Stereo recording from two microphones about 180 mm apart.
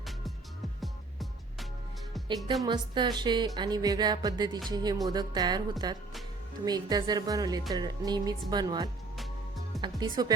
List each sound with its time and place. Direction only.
0.8 s music: centre (ahead or behind)
2.6 s speech: 25° right (ahead or behind)
6.7 s speech: 20° right (ahead or behind)
9.1 s music: centre (ahead or behind)
10.0 s speech: 20° right (ahead or behind)